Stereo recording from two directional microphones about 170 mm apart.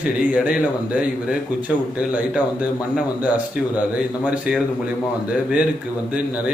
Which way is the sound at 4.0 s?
5° right (ahead or behind).